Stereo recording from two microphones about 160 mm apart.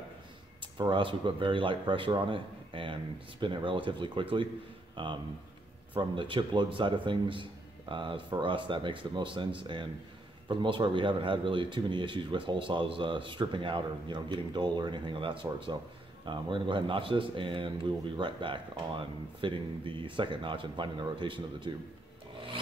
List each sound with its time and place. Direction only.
0.6 s speech: 30° right (ahead or behind)